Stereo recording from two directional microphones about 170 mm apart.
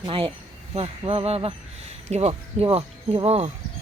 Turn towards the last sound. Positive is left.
turn(degrees=-40)  # may be behind; listen again after turning